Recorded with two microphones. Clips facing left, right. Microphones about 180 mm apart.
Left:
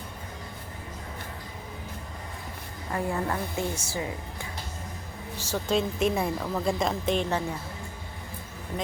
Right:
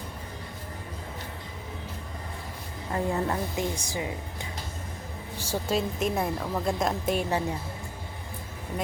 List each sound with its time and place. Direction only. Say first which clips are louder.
2.9 s a woman's voice: right 1 dB; 20° right (ahead or behind)
5.4 s a woman's voice: left 1 dB; 10° right (ahead or behind)